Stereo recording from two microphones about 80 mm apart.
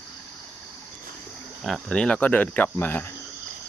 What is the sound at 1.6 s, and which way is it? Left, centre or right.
Speech, centre.